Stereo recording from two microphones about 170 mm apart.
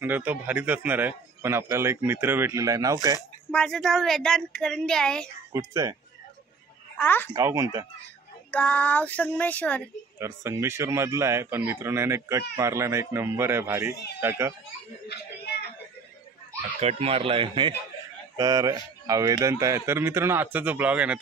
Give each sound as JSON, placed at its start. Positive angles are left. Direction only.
{"t": 0.0, "sound": "a man's voice", "side_deg": -10}
{"t": 3.5, "sound": "speech", "side_deg": 5}
{"t": 5.5, "sound": "speech", "side_deg": -20}
{"t": 7.0, "sound": "speech", "side_deg": 10}
{"t": 7.3, "sound": "speech", "side_deg": -20}
{"t": 8.5, "sound": "speech", "side_deg": 10}
{"t": 10.1, "sound": "a man's voice", "side_deg": -15}
{"t": 15.0, "sound": "a sound", "side_deg": 70}
{"t": 16.8, "sound": "a man's voice", "side_deg": -35}